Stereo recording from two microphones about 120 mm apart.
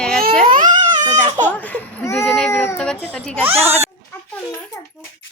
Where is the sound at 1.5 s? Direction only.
15° left (ahead or behind).